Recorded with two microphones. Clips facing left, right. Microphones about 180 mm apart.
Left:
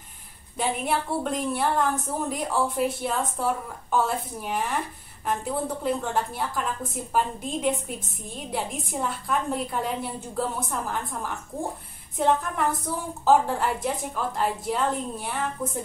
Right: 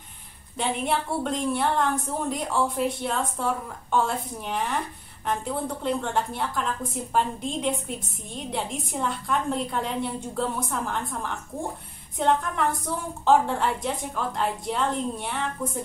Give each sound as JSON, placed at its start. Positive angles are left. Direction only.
{"t": 0.6, "sound": "a woman's voice", "side_deg": 0}